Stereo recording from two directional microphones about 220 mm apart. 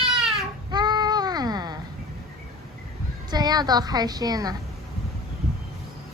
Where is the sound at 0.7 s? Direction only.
20° right (ahead or behind).